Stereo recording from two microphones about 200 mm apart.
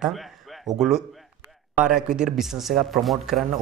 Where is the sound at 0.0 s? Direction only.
Centre (ahead or behind).